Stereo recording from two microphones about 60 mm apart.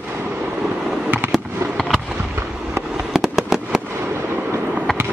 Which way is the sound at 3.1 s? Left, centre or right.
Centre.